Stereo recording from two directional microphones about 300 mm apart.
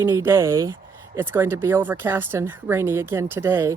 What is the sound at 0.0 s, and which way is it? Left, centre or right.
A woman's voice, centre.